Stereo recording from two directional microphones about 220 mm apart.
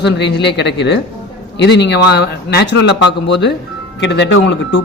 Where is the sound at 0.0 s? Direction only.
50° left (ahead or behind).